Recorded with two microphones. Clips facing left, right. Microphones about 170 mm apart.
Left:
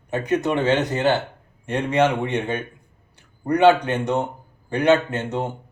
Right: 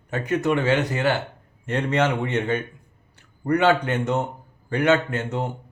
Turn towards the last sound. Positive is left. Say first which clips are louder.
# left 1 dB
turn(degrees=20)  # may be behind; listen again after turning